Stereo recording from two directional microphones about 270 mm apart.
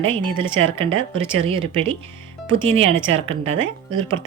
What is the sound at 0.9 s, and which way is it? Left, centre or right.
Speech, right.